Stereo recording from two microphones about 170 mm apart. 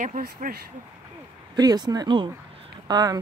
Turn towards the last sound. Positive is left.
turn(degrees=-20)  # may be behind; listen again after turning